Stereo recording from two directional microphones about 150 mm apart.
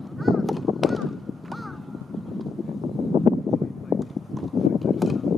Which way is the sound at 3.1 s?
25° right (ahead or behind).